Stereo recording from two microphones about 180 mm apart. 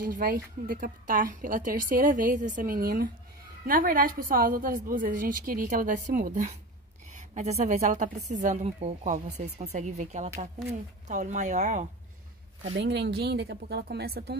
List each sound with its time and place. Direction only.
0.0 s a woman's voice: 50° right (ahead or behind)
12.7 s speech: 70° right (ahead or behind)